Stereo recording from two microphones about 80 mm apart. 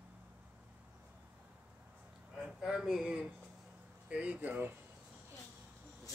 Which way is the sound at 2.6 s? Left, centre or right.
Centre.